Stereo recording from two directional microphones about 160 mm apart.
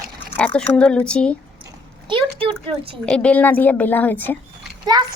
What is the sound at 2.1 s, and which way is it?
Speech, 30° right (ahead or behind).